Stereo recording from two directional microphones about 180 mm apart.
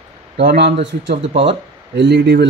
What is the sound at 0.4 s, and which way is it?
Speech, 65° right (ahead or behind).